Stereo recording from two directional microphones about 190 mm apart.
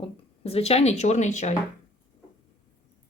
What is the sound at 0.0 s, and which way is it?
Speech, 30° left (ahead or behind).